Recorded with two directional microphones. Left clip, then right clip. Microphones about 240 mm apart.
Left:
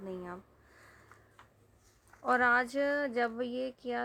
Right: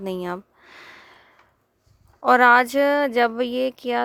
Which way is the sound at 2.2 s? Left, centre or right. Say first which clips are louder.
Right 13 dB; right.